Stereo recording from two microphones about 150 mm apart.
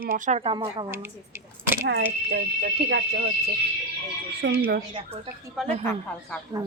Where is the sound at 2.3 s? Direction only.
90° right.